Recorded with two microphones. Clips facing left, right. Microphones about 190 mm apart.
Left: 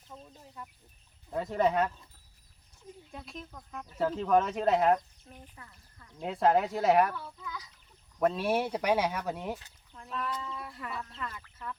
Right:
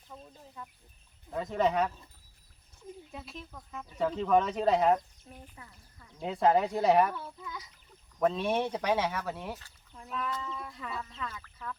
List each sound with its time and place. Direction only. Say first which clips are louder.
0.1 s speech: even; centre (ahead or behind)
3.1 s speech: even; centre (ahead or behind)
7.1 s a child's voice: even; 20° right (ahead or behind)
8.2 s speech: even; 5° left (ahead or behind)
9.9 s speech: even; 5° right (ahead or behind)